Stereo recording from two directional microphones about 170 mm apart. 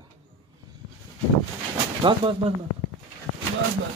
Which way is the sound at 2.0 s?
30° right (ahead or behind).